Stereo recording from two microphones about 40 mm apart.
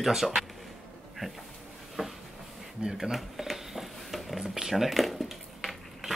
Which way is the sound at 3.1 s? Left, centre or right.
Centre.